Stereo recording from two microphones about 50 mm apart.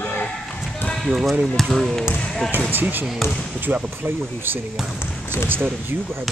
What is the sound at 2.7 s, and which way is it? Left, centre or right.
Speech, right.